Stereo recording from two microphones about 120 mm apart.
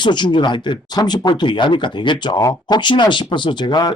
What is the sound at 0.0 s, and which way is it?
Speech, 40° left (ahead or behind).